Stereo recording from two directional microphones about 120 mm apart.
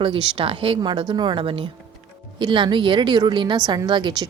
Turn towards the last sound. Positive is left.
turn(degrees=-35)  # may be behind; listen again after turning